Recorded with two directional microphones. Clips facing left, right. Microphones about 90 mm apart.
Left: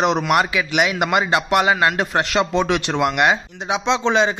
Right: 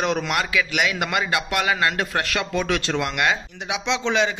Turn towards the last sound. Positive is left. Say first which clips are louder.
# left 4 dB
turn(degrees=35)  # may be behind; listen again after turning